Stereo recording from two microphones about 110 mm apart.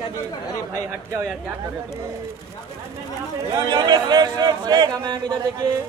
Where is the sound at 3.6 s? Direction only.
40° right (ahead or behind).